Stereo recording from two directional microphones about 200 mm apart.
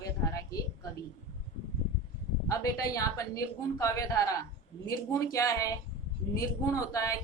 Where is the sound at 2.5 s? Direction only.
15° left (ahead or behind).